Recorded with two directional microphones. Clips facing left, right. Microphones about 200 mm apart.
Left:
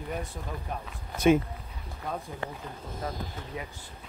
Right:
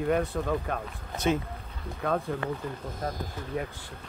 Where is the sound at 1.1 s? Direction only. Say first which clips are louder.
Left 5 dB; 10° left (ahead or behind).